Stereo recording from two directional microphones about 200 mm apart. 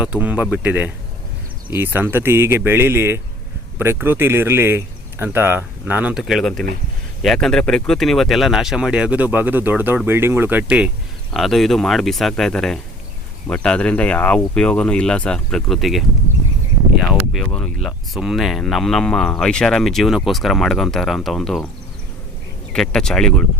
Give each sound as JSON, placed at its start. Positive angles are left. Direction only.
{"t": 0.0, "sound": "speech", "side_deg": -5}
{"t": 17.3, "sound": "speech", "side_deg": 5}
{"t": 22.7, "sound": "speech", "side_deg": 5}